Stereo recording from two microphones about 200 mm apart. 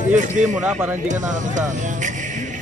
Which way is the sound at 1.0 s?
40° right (ahead or behind).